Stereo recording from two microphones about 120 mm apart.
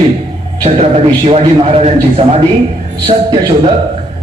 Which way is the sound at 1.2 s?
55° right (ahead or behind).